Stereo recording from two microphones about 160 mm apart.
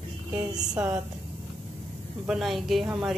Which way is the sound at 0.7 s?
5° right (ahead or behind).